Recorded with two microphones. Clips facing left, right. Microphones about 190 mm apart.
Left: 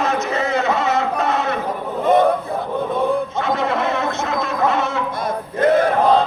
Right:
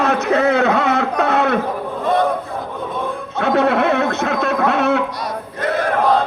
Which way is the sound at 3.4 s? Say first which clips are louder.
Right 5 dB; 65° right (ahead or behind).